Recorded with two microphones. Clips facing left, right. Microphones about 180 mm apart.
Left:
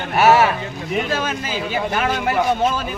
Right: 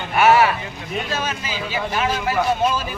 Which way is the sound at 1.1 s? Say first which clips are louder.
Left 3 dB; 50° left (ahead or behind).